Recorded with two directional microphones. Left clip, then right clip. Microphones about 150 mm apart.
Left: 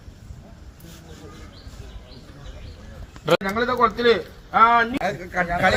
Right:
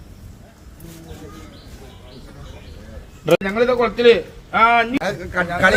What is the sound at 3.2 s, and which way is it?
A man's voice, 15° right (ahead or behind).